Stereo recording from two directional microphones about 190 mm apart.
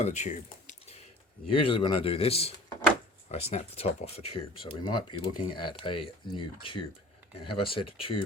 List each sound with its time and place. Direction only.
0.0 s a sound: 40° left (ahead or behind)
1.5 s speech: 25° left (ahead or behind)
3.5 s speech: 35° left (ahead or behind)